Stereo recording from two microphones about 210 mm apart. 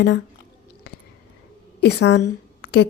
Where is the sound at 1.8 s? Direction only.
55° left (ahead or behind).